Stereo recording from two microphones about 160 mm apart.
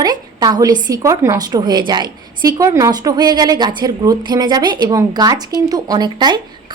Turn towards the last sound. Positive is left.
turn(degrees=-25)  # may be behind; listen again after turning